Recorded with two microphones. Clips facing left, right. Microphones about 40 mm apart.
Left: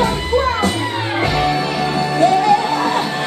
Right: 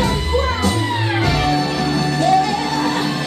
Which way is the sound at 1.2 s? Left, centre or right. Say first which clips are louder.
Left 2 dB; left.